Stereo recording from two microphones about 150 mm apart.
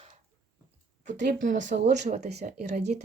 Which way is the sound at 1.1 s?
60° right (ahead or behind).